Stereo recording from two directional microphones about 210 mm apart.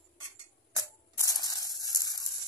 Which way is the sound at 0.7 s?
15° left (ahead or behind).